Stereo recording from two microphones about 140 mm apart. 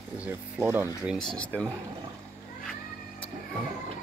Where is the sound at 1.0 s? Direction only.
5° left (ahead or behind).